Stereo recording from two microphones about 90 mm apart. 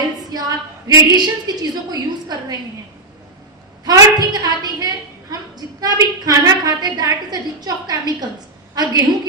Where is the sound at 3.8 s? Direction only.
50° right (ahead or behind).